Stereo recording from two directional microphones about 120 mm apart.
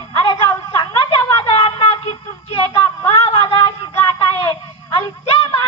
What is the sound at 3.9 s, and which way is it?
Child singing, 30° left (ahead or behind).